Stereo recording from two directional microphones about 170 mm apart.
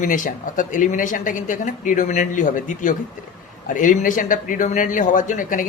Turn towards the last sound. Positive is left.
turn(degrees=50)  # may be behind; listen again after turning